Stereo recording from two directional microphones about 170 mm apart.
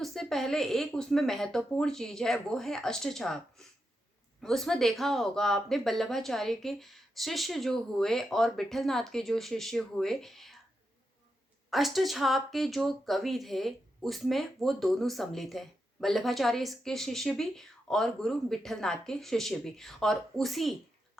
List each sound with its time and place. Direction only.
0.0 s speech: centre (ahead or behind)
11.7 s speech: centre (ahead or behind)